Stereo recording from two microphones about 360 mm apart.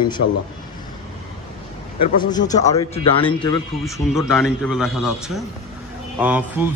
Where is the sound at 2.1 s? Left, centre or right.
Centre.